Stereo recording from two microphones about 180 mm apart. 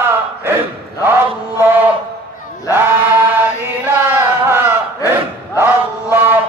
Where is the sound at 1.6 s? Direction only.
10° right (ahead or behind).